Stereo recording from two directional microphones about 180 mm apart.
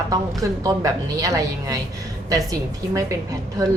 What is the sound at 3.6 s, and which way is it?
Speech, 20° right (ahead or behind).